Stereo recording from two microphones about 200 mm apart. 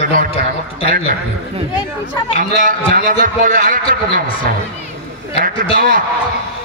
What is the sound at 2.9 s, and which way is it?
Speech, 45° right (ahead or behind).